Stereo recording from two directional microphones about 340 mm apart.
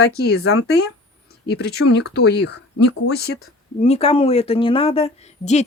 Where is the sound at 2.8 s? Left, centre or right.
Left.